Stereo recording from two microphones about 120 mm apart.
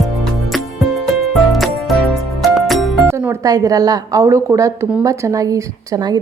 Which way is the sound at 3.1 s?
25° right (ahead or behind).